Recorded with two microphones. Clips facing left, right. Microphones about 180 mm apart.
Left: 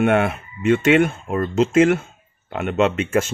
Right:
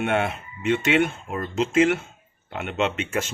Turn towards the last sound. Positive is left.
turn(degrees=50)  # may be behind; listen again after turning